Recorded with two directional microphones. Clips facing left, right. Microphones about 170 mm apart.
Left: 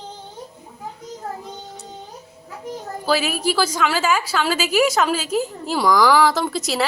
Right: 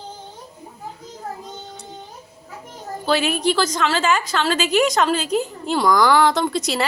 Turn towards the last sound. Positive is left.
turn(degrees=0)  # may be behind; listen again after turning